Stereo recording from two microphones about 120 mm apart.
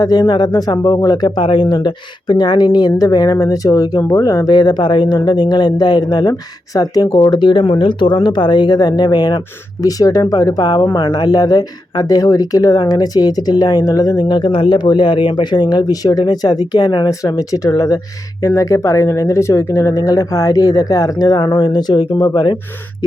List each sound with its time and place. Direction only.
0.0 s speech: 35° left (ahead or behind)
0.8 s speech: 20° left (ahead or behind)
1.0 s speech: 35° left (ahead or behind)